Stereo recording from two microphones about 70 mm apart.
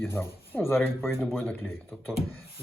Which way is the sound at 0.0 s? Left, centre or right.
Left.